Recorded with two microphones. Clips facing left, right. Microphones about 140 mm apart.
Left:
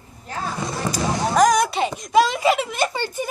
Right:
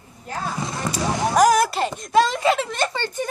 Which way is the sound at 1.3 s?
5° right (ahead or behind).